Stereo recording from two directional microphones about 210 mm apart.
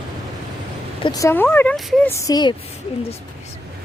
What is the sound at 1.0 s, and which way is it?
Speech, 15° left (ahead or behind).